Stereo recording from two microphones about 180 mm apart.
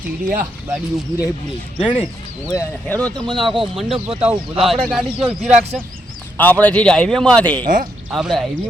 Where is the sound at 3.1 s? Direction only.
25° right (ahead or behind).